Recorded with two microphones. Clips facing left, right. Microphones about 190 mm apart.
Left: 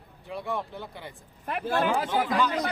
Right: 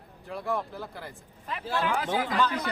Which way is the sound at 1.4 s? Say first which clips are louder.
Left 4 dB; 55° left (ahead or behind).